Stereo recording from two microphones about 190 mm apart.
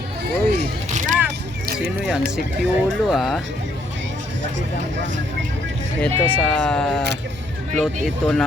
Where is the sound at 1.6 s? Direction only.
55° right (ahead or behind).